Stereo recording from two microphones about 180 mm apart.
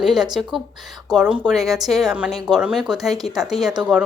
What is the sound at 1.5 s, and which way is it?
A woman's voice, centre (ahead or behind).